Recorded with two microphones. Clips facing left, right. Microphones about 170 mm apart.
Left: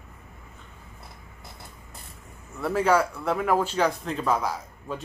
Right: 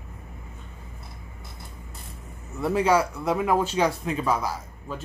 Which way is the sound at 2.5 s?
15° right (ahead or behind).